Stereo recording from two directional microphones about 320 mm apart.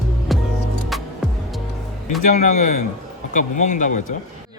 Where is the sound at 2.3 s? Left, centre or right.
Left.